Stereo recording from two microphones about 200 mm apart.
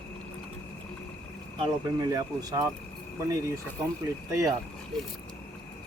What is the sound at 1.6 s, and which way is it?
Speech, 20° right (ahead or behind).